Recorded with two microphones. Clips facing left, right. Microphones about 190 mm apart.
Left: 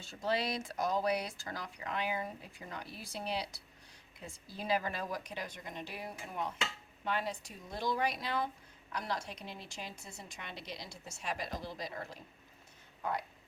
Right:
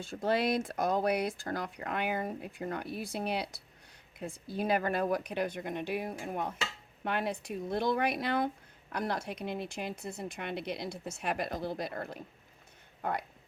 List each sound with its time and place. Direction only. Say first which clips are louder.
0.0 s speech: right 5 dB; 55° right (ahead or behind)